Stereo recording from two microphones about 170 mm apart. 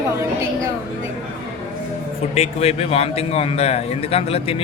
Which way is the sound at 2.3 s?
40° left (ahead or behind).